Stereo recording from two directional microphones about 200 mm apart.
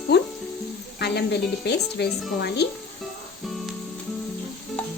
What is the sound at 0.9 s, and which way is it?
Speech, 55° left (ahead or behind).